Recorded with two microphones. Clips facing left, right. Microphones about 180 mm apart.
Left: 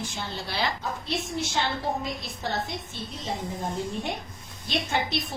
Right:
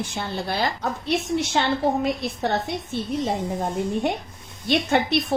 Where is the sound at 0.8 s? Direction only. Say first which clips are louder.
Right 6 dB; 65° right (ahead or behind).